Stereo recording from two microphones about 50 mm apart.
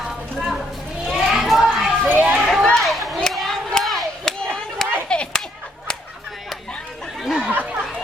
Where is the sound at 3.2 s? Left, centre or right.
Centre.